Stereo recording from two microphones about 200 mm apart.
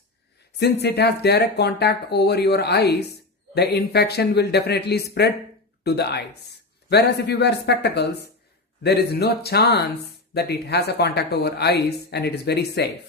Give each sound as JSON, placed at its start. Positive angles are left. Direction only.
{"t": 0.6, "sound": "speech", "side_deg": 55}